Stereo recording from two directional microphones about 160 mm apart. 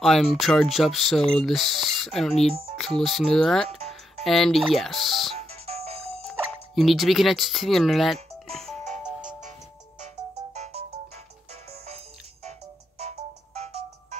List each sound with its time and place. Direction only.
0.0 s speech: centre (ahead or behind)
5.7 s music: 40° right (ahead or behind)
6.7 s speech: centre (ahead or behind)
9.0 s music: 5° right (ahead or behind)
10.5 s music: 40° right (ahead or behind)